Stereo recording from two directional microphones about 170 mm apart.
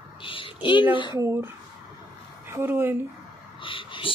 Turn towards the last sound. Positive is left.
turn(degrees=30)  # may be behind; listen again after turning